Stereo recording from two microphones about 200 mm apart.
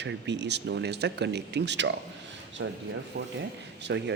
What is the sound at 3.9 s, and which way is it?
Speech, 60° right (ahead or behind).